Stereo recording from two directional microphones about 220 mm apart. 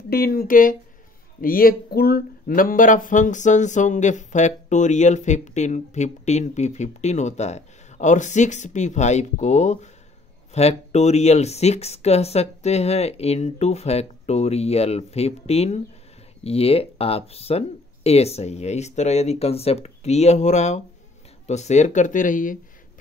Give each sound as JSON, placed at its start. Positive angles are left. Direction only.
{"t": 0.1, "sound": "speech", "side_deg": 40}